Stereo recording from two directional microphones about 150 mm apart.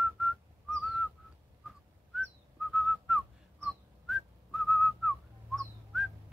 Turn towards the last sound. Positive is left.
turn(degrees=0)  # may be behind; listen again after turning